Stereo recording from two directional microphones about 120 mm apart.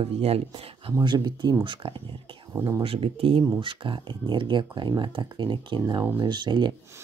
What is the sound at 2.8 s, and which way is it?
Speech, 50° right (ahead or behind).